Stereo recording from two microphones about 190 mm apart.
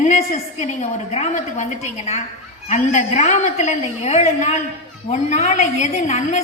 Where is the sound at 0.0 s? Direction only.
35° left (ahead or behind).